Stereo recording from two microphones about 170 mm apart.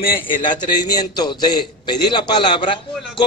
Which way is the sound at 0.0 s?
55° left (ahead or behind).